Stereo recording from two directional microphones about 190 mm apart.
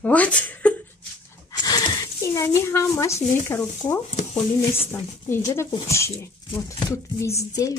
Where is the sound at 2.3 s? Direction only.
15° left (ahead or behind).